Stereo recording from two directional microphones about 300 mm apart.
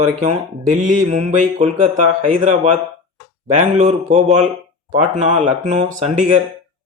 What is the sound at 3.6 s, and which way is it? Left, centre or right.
Speech, right.